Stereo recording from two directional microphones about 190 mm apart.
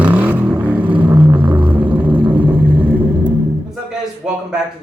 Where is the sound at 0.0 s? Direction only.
5° right (ahead or behind).